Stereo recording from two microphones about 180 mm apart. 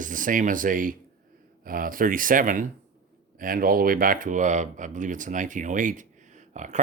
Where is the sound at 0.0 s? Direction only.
50° right (ahead or behind).